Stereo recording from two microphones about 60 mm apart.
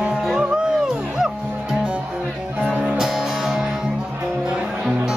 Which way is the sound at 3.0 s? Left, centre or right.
Centre.